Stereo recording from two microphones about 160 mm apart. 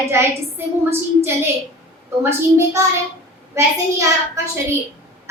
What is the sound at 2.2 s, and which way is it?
Speech, 15° right (ahead or behind).